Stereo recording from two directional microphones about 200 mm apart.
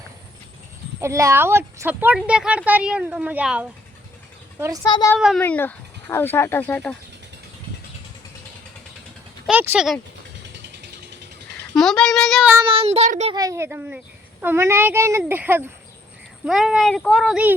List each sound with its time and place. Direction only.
1.0 s speech: 15° right (ahead or behind)
4.8 s speech: 20° left (ahead or behind)
9.5 s speech: 10° right (ahead or behind)
11.7 s speech: centre (ahead or behind)
12.6 s speech: 30° right (ahead or behind)
13.3 s speech: 15° right (ahead or behind)